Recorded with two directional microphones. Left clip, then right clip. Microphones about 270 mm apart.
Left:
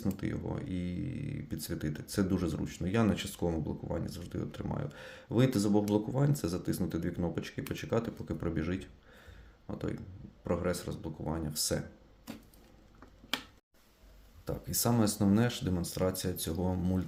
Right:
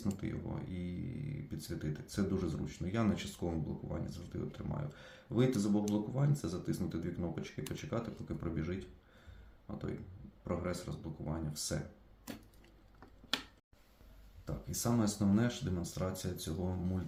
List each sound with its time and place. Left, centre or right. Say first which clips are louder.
0.0 s a sound: left 5 dB; left
1.5 s speech: left 5 dB; left
14.4 s speech: left 6 dB; left